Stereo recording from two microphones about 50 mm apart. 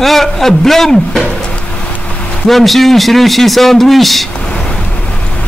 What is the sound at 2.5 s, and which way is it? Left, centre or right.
A man's voice, centre.